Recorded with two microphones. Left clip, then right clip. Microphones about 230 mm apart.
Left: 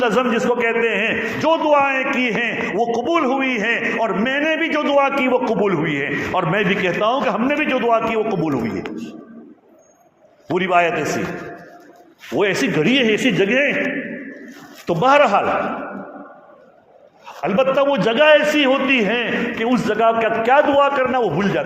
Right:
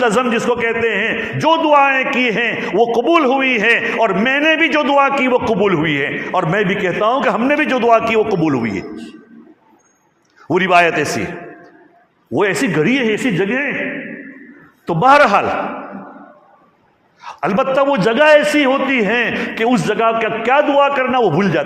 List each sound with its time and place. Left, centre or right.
0.0 s a man's voice: right
10.5 s a man's voice: right
12.4 s a man's voice: right
14.8 s a man's voice: right
17.2 s a man's voice: right